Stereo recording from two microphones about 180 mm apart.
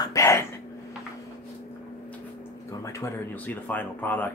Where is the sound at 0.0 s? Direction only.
15° left (ahead or behind).